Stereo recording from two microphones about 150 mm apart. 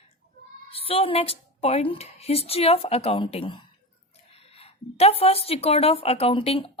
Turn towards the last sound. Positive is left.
turn(degrees=40)  # may be behind; listen again after turning